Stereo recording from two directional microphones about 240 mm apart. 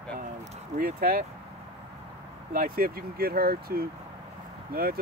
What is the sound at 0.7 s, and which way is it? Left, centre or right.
Speech, right.